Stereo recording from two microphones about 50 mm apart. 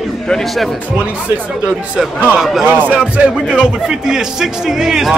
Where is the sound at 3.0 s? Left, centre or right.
Right.